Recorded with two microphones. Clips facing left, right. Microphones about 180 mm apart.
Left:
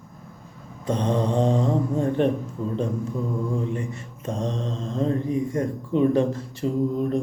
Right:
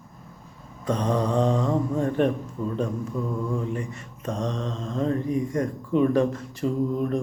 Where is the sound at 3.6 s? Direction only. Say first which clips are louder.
Left 2 dB; 30° left (ahead or behind).